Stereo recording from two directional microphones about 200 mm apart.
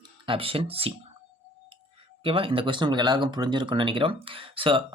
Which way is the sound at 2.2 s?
25° right (ahead or behind).